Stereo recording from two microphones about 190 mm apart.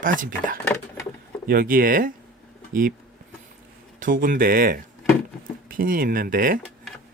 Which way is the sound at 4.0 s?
45° right (ahead or behind).